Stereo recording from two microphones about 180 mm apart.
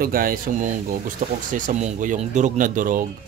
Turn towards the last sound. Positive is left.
turn(degrees=-50)  # may be behind; listen again after turning